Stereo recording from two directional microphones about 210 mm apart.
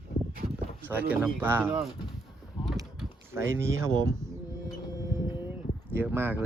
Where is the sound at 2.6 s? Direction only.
20° left (ahead or behind).